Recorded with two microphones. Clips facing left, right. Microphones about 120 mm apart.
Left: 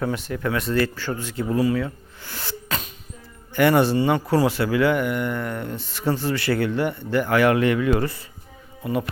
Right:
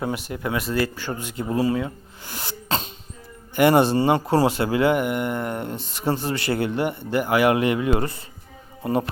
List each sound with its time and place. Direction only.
0.0 s speech: 15° right (ahead or behind)
2.6 s music: 25° right (ahead or behind)
3.5 s speech: 20° right (ahead or behind)
8.8 s speech: 35° right (ahead or behind)